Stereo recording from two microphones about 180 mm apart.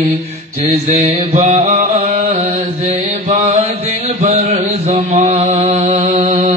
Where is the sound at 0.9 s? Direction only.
35° right (ahead or behind).